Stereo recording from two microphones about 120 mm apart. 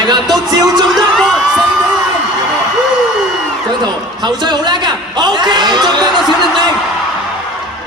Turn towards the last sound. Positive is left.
turn(degrees=-40)  # may be behind; listen again after turning